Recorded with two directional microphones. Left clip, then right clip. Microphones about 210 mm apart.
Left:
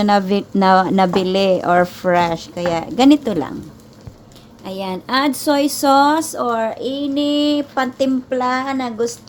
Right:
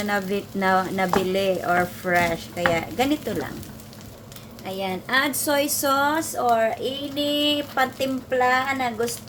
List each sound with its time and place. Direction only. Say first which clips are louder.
0.0 s a woman's voice: left 9 dB; 50° left (ahead or behind)
4.6 s a woman's voice: left 3 dB; 45° left (ahead or behind)